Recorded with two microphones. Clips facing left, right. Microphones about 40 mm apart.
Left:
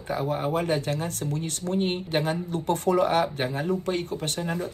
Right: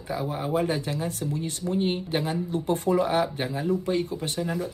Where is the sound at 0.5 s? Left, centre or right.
Left.